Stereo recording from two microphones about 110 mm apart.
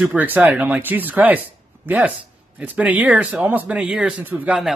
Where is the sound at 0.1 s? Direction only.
15° right (ahead or behind).